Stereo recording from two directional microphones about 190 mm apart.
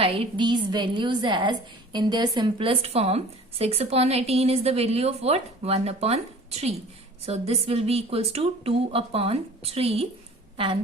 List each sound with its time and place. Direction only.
0.0 s a woman's voice: 30° right (ahead or behind)